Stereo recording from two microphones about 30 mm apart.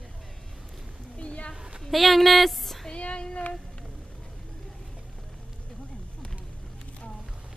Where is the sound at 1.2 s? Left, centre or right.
Left.